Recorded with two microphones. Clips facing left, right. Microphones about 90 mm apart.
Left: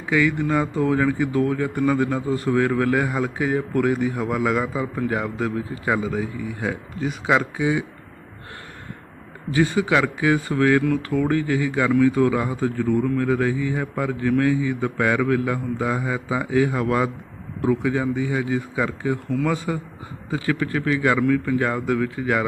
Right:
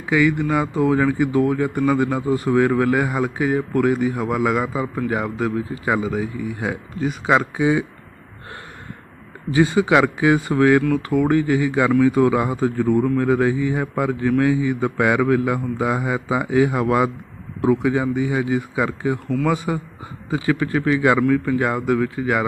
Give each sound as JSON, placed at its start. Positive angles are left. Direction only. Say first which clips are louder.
{"t": 0.0, "sound": "a man's voice", "louder": "right 2 dB", "side_deg": -5}
{"t": 9.5, "sound": "a man's voice", "louder": "right 3 dB", "side_deg": -20}